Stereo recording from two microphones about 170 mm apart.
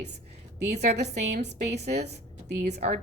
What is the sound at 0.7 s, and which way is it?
A woman's voice, 75° right (ahead or behind).